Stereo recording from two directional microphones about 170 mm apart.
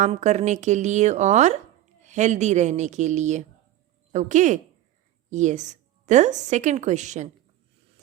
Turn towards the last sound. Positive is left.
turn(degrees=-45)  # may be behind; listen again after turning